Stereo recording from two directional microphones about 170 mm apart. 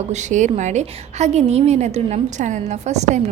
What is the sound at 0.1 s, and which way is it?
A woman's voice, 45° right (ahead or behind).